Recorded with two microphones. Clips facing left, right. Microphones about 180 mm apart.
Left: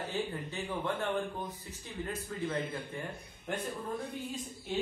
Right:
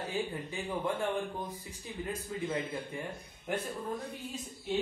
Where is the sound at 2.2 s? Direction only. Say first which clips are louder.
Even; 10° right (ahead or behind).